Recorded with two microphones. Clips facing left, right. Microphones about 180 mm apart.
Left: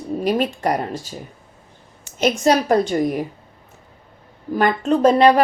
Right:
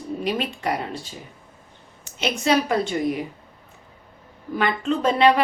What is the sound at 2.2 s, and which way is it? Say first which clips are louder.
Speech: left 4 dB; 45° left (ahead or behind).